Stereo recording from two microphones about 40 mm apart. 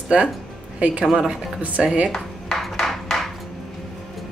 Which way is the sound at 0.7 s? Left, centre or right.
Right.